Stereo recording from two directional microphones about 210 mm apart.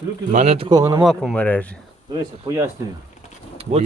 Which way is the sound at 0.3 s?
35° right (ahead or behind).